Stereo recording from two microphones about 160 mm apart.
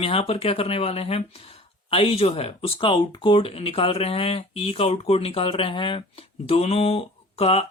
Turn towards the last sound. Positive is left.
turn(degrees=40)  # may be behind; listen again after turning